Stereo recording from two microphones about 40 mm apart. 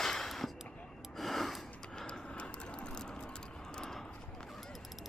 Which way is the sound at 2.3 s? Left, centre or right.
Left.